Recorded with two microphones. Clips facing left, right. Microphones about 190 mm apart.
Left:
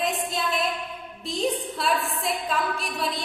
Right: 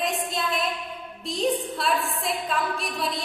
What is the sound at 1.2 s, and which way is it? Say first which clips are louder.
A woman's voice: right 1 dB; centre (ahead or behind).